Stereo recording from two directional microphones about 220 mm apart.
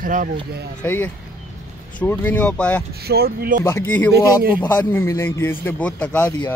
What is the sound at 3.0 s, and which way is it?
Speech, 45° right (ahead or behind).